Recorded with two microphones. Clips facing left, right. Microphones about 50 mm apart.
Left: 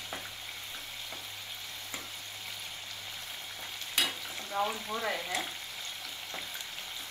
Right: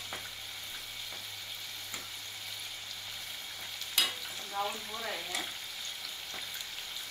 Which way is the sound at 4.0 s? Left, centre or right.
Left.